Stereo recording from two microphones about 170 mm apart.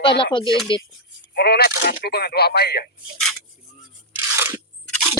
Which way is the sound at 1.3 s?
70° left (ahead or behind).